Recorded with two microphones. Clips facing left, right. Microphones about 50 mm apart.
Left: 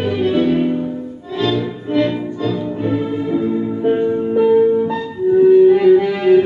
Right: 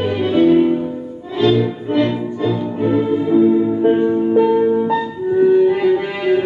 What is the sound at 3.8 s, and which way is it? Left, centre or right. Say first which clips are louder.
Music: right 2 dB; centre.